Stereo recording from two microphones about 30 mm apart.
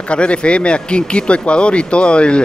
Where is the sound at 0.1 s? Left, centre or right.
Left.